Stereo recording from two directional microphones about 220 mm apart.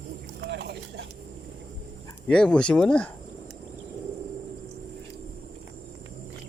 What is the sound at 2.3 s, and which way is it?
Speech, 5° left (ahead or behind).